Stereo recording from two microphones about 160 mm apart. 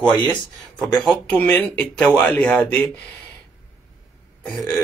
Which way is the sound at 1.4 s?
10° left (ahead or behind).